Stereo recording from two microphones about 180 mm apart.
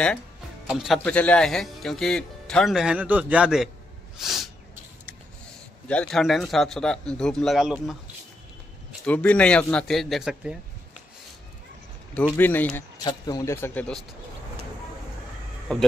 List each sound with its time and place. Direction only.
0.7 s speech: centre (ahead or behind)
4.2 s a sound: centre (ahead or behind)
5.9 s speech: 5° left (ahead or behind)
9.0 s speech: 5° left (ahead or behind)
12.1 s a man's voice: 10° left (ahead or behind)
13.0 s a man's voice: 20° left (ahead or behind)
15.7 s speech: 5° left (ahead or behind)